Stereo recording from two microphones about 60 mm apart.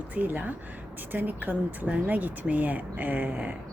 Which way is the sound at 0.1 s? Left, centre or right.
Right.